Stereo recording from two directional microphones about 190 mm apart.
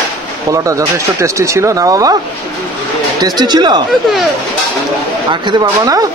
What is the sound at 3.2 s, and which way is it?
Speech, 20° right (ahead or behind).